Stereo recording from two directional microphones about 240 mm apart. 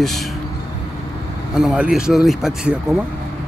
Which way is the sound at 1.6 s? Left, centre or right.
Centre.